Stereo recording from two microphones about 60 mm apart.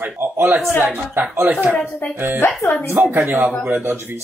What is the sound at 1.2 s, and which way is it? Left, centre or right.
Speech, right.